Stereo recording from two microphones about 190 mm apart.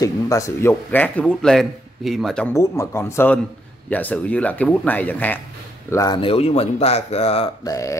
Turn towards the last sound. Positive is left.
turn(degrees=15)  # may be behind; listen again after turning